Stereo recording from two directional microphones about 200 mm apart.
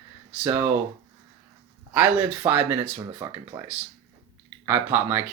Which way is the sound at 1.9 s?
10° right (ahead or behind).